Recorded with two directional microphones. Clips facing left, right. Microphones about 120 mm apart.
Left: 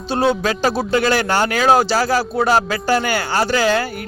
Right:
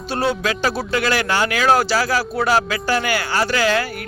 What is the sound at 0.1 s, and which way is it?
Speech, 25° left (ahead or behind).